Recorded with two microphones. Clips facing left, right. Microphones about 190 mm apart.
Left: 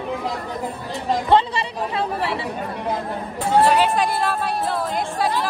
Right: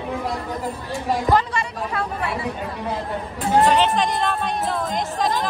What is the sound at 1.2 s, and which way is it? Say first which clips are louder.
Speech: left 3 dB; 25° left (ahead or behind).